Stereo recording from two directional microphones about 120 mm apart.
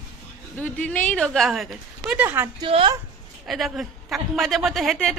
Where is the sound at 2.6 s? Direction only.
45° right (ahead or behind).